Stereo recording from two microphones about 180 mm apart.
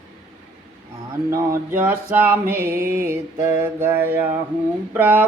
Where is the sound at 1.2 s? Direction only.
15° right (ahead or behind).